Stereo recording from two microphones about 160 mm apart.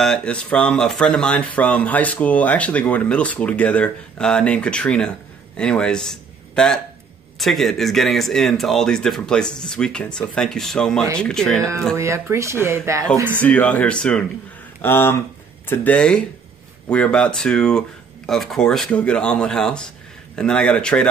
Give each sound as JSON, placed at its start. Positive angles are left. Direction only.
{"t": 0.0, "sound": "speech", "side_deg": 5}
{"t": 12.0, "sound": "speech", "side_deg": -20}
{"t": 13.4, "sound": "speech", "side_deg": 10}